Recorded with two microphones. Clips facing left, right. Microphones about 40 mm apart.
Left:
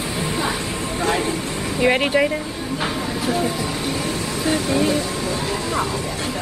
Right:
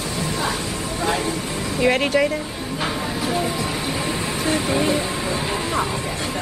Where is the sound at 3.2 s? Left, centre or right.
Centre.